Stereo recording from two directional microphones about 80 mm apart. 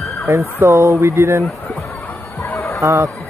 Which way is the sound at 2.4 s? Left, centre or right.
Left.